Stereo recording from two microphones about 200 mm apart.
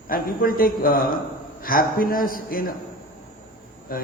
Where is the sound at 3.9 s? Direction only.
45° left (ahead or behind).